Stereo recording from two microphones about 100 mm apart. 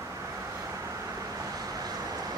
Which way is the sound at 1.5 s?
40° right (ahead or behind).